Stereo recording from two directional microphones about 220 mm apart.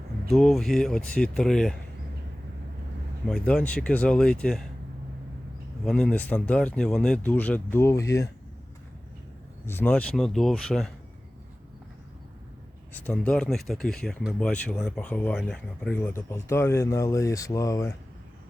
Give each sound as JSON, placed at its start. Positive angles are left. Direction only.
{"t": 0.3, "sound": "speech", "side_deg": 0}
{"t": 3.2, "sound": "speech", "side_deg": 5}
{"t": 5.8, "sound": "speech", "side_deg": 5}
{"t": 9.6, "sound": "speech", "side_deg": 10}
{"t": 12.9, "sound": "speech", "side_deg": 5}